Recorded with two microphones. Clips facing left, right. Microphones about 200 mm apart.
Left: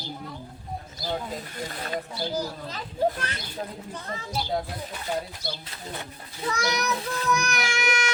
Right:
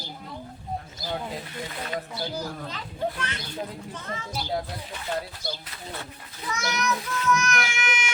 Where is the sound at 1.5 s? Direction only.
40° left (ahead or behind).